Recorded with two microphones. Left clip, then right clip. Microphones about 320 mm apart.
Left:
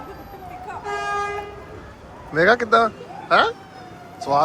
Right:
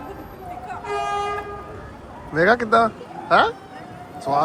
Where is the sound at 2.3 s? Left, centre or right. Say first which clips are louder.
Left 1 dB; centre.